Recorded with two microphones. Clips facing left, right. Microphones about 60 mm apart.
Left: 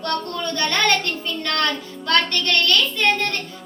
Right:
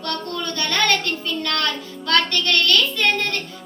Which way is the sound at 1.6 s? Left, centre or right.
Left.